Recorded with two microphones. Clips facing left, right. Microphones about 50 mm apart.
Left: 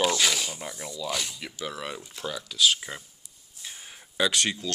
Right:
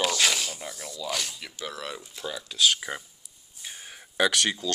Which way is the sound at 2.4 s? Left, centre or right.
Right.